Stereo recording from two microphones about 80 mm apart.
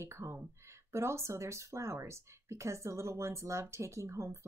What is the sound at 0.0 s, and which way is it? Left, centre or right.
Speech, right.